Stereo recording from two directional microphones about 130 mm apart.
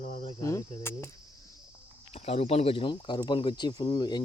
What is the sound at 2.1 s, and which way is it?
Speech, 50° left (ahead or behind).